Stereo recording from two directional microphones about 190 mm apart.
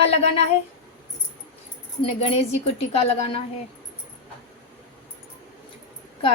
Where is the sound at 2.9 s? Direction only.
35° left (ahead or behind).